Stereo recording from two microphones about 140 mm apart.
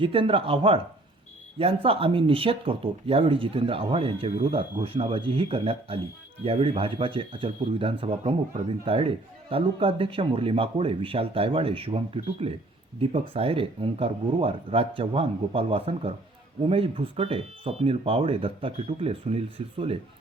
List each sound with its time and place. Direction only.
0.0 s speech: 40° right (ahead or behind)